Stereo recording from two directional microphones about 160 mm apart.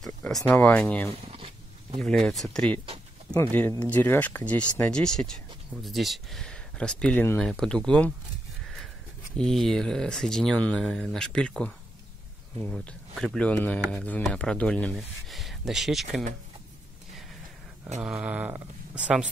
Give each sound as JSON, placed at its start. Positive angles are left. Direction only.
{"t": 0.0, "sound": "a sound", "side_deg": 0}
{"t": 0.5, "sound": "speech", "side_deg": 10}
{"t": 1.1, "sound": "a sound", "side_deg": -35}
{"t": 2.0, "sound": "speech", "side_deg": 5}
{"t": 9.4, "sound": "speech", "side_deg": 0}
{"t": 18.0, "sound": "speech", "side_deg": -5}